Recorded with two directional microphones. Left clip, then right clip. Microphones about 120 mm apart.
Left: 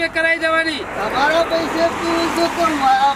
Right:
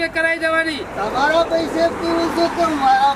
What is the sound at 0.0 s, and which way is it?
Speech, centre (ahead or behind).